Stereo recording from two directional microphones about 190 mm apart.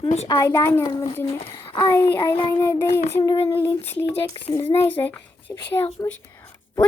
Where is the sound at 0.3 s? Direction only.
20° left (ahead or behind).